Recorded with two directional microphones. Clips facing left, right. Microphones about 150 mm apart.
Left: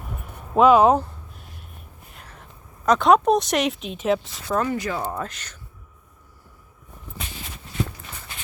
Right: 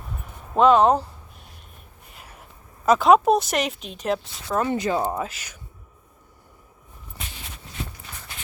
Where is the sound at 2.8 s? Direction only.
5° right (ahead or behind).